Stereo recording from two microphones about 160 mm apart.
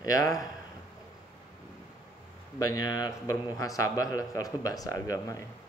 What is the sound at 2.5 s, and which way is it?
A man's voice, 20° left (ahead or behind).